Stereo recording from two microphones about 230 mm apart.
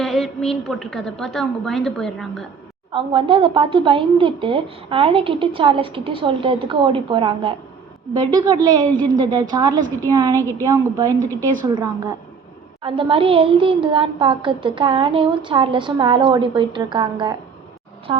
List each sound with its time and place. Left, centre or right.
0.0 s a woman's voice: centre
2.9 s a woman's voice: right